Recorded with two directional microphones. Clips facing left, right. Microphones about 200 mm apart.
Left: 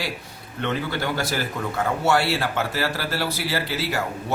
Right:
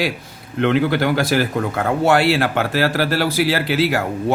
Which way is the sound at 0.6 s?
75° right (ahead or behind).